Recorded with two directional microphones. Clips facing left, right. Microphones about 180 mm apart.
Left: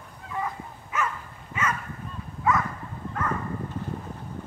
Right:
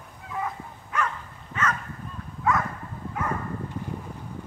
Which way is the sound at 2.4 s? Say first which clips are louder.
Even; centre (ahead or behind).